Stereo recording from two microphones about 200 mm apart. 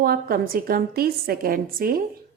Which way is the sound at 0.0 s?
50° right (ahead or behind).